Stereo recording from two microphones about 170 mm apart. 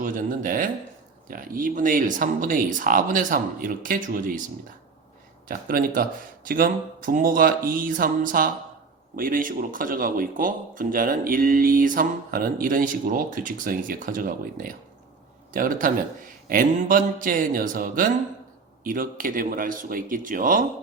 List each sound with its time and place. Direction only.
0.0 s speech: 50° right (ahead or behind)
5.5 s speech: 55° right (ahead or behind)